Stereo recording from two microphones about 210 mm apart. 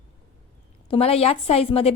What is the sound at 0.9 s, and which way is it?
A woman's voice, 30° left (ahead or behind).